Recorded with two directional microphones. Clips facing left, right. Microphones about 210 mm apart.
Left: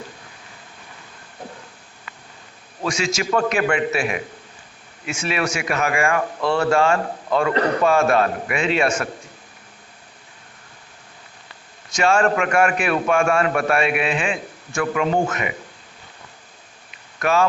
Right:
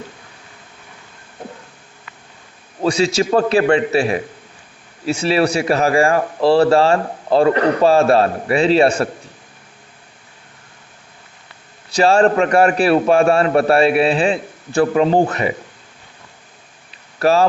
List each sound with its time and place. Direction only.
2.8 s a man's voice: 35° right (ahead or behind)
11.9 s a man's voice: 35° right (ahead or behind)
17.2 s speech: 35° right (ahead or behind)